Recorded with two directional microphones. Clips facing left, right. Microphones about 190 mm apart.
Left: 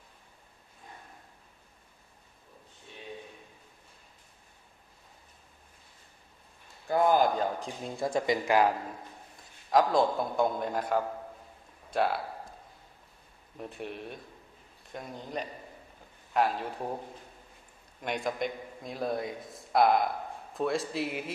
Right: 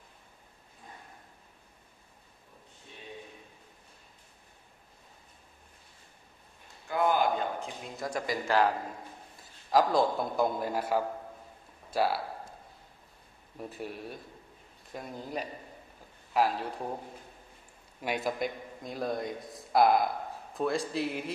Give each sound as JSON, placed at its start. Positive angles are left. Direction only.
{"t": 6.9, "sound": "a sound", "side_deg": 35}
{"t": 8.5, "sound": "speech", "side_deg": 10}
{"t": 9.4, "sound": "a man's voice", "side_deg": 0}
{"t": 13.6, "sound": "a man's voice", "side_deg": 0}
{"t": 18.0, "sound": "a man's voice", "side_deg": -5}